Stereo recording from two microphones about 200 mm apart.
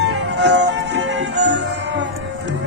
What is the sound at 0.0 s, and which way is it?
Music, 60° right (ahead or behind).